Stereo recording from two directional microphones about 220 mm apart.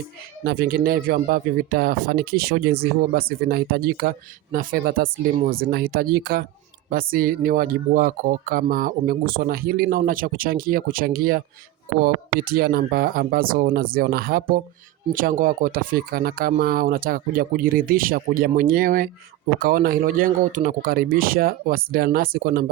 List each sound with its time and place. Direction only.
0.4 s speech: 45° right (ahead or behind)